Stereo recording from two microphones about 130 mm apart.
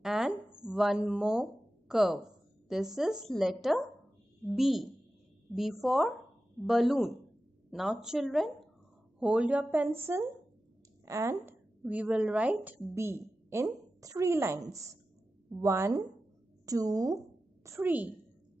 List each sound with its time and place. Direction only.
0.0 s a sound: 5° right (ahead or behind)
0.7 s a woman's voice: 5° right (ahead or behind); by 11.5 s 20° right (ahead or behind)
11.8 s a woman's voice: 10° right (ahead or behind); by 17.2 s 25° right (ahead or behind)
17.6 s a woman's voice: 15° right (ahead or behind)